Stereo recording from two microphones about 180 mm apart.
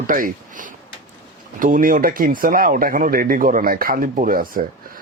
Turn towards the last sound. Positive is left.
turn(degrees=-50)  # may be behind; listen again after turning